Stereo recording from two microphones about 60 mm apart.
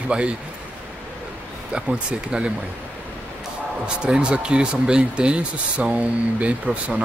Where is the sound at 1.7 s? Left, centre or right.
Centre.